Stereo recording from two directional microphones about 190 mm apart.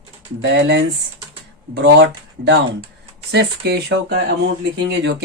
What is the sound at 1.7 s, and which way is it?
Speech, 65° right (ahead or behind).